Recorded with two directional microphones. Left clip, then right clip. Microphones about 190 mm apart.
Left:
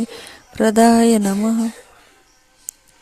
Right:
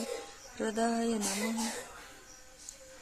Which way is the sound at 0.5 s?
50° left (ahead or behind).